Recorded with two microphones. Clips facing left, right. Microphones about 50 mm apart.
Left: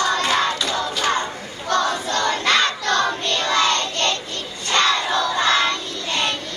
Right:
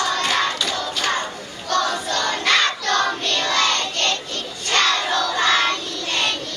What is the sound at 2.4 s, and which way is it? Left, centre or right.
Music, left.